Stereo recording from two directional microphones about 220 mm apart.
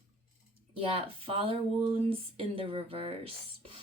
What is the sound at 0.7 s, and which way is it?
Speech, 25° right (ahead or behind).